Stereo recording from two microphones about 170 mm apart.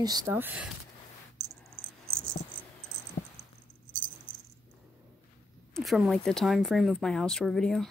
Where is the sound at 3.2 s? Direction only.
50° left (ahead or behind).